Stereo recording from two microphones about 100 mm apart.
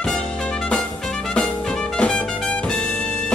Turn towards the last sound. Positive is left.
turn(degrees=10)  # may be behind; listen again after turning